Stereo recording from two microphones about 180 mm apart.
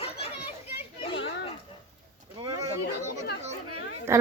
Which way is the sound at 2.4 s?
30° right (ahead or behind).